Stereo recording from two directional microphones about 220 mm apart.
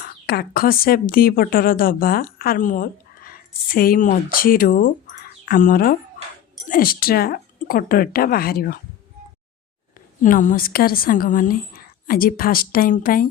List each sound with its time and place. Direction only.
0.0 s a woman's voice: 45° left (ahead or behind)
10.2 s a woman's voice: 40° left (ahead or behind)